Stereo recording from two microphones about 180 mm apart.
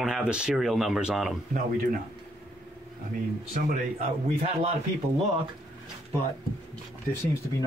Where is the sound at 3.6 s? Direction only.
45° right (ahead or behind).